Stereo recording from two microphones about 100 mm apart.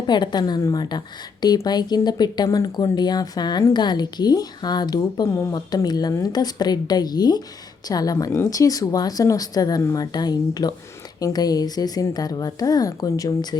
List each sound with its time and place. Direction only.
0.1 s speech: 45° left (ahead or behind)